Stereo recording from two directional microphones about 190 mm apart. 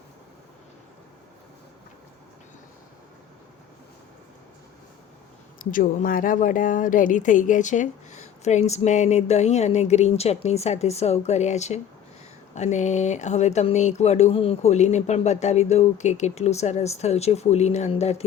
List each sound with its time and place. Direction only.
5.5 s a woman's voice: 45° left (ahead or behind)